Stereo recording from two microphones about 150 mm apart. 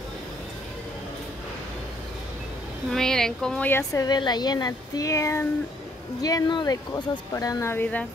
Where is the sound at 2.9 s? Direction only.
5° left (ahead or behind).